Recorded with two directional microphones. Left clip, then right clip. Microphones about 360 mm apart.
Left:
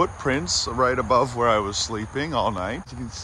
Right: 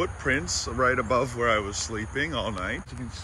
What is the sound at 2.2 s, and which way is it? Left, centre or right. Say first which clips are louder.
Speech: left 4 dB; left.